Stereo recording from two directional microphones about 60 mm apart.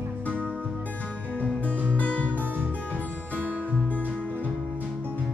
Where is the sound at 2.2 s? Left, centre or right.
Right.